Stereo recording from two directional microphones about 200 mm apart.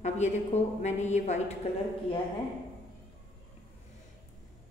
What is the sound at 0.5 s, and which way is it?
A woman's voice, 35° left (ahead or behind).